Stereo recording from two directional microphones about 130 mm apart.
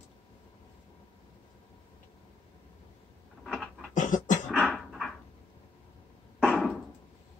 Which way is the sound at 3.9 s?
80° left.